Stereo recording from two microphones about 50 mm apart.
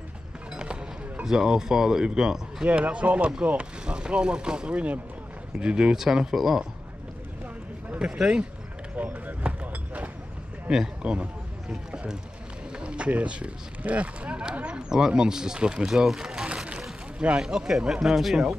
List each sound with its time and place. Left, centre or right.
1.2 s speech: centre
2.6 s speech: right; by 6.6 s centre
8.0 s speech: centre
8.9 s a sound: right
11.0 s speech: centre
16.4 s a sound: right
17.4 s speech: centre